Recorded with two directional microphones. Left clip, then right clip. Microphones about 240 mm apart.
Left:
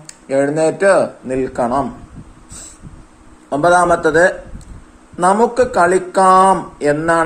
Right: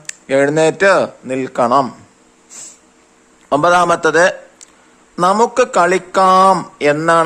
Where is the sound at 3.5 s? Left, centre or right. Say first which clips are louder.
Even; right.